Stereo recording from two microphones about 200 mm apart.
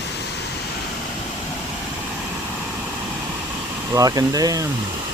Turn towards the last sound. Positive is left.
turn(degrees=-20)  # may be behind; listen again after turning